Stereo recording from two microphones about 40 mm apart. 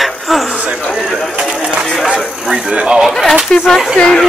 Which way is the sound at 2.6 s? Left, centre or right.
Right.